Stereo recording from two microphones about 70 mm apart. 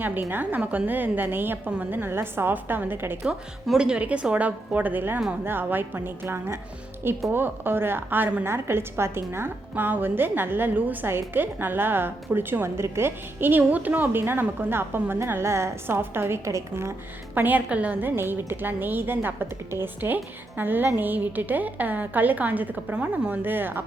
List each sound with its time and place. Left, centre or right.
0.0 s a woman's voice: right
3.8 s a woman's voice: centre; by 16.9 s right
17.3 s a woman's voice: right
18.1 s a woman's voice: right